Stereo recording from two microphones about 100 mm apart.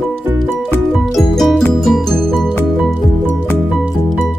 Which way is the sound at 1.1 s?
Centre (ahead or behind).